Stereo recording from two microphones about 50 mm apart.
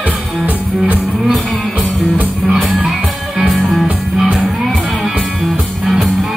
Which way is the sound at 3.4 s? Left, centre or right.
Centre.